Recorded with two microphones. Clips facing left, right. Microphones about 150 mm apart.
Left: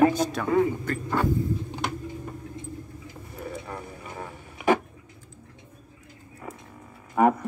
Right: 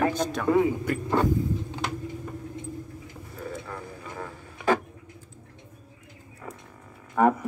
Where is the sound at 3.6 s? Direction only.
20° left (ahead or behind).